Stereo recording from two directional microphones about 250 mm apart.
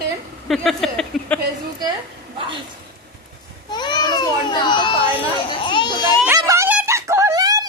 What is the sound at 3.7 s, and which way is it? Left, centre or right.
Speech, centre.